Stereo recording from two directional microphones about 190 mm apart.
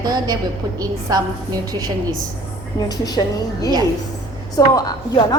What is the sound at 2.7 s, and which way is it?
A woman's voice, 20° left (ahead or behind).